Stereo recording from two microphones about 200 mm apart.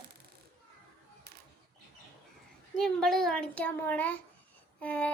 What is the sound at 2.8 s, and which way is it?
A child's voice, centre (ahead or behind).